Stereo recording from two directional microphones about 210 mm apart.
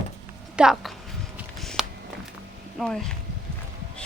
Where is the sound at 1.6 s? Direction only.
Centre (ahead or behind).